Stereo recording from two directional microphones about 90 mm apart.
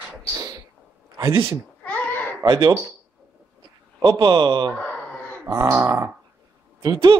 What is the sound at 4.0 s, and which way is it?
Speech, 50° right (ahead or behind).